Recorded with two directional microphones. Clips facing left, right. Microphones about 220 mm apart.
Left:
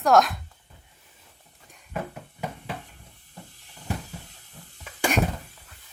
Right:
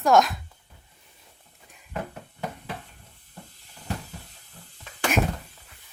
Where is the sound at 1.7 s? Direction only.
5° right (ahead or behind).